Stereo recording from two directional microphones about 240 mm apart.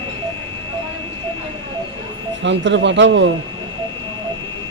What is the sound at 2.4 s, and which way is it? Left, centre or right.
Speech, right.